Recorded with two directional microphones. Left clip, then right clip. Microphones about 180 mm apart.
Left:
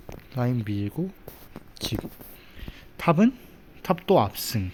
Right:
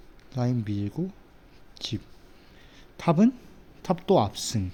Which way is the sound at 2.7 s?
5° right (ahead or behind).